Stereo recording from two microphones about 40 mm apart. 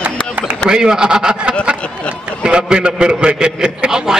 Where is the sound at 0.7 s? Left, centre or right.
Centre.